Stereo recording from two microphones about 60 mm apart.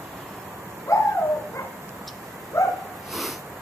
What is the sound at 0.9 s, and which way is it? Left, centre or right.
Bird, left.